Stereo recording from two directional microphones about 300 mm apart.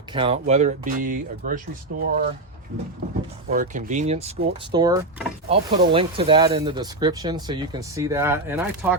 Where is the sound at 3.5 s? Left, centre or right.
Right.